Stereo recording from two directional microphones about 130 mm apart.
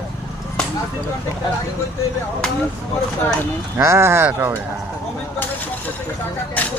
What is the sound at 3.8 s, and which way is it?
Speech, 20° right (ahead or behind).